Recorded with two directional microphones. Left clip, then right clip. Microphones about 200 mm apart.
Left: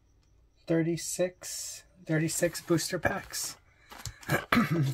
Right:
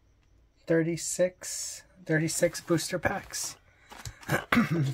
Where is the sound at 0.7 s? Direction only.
25° right (ahead or behind).